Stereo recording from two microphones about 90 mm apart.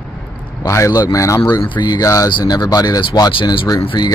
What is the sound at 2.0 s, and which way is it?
Speech, 35° left (ahead or behind).